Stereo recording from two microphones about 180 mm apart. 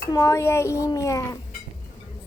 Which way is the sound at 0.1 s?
15° left (ahead or behind).